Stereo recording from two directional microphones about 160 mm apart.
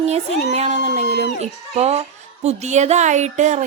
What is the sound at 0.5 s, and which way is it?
A child's voice, 40° right (ahead or behind).